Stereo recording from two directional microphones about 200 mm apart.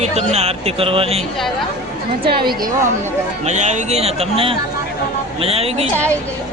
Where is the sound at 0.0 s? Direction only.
35° right (ahead or behind).